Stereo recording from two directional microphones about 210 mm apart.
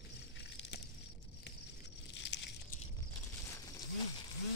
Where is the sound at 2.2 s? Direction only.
55° left (ahead or behind).